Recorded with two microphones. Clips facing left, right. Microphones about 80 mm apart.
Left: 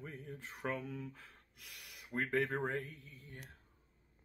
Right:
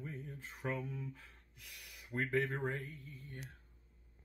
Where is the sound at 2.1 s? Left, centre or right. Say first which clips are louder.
Even; left.